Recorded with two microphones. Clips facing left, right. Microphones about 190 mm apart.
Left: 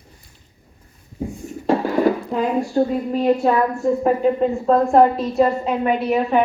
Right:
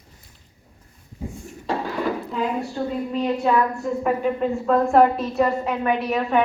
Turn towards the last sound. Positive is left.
turn(degrees=20)  # may be behind; listen again after turning